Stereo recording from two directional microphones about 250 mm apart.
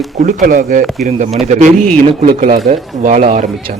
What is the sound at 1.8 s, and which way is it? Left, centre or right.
Speech, right.